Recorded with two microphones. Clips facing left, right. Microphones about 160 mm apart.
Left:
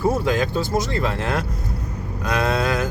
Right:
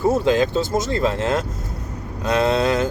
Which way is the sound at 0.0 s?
25° right (ahead or behind).